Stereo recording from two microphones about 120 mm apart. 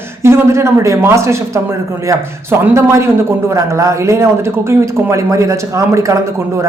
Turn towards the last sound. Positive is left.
turn(degrees=-25)  # may be behind; listen again after turning